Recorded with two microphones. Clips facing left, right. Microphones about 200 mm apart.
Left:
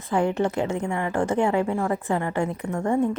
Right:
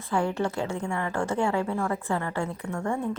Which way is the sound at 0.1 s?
20° left (ahead or behind).